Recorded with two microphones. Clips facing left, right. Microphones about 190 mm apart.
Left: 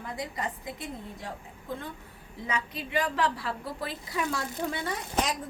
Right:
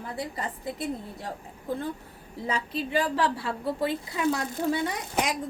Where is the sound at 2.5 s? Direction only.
35° right (ahead or behind).